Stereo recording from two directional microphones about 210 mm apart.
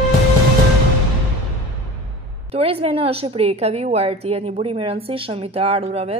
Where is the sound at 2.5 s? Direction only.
25° right (ahead or behind).